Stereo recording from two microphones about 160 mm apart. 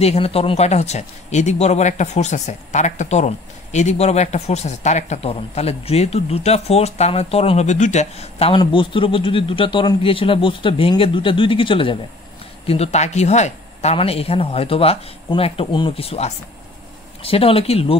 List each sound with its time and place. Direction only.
0.0 s speech: 40° left (ahead or behind)